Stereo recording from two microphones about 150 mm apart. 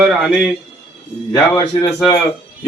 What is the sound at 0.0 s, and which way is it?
Speech, centre (ahead or behind).